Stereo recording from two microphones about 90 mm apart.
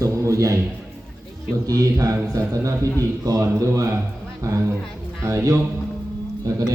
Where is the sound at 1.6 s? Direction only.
40° right (ahead or behind).